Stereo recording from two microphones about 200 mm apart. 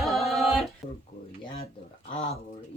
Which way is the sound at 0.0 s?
Centre (ahead or behind).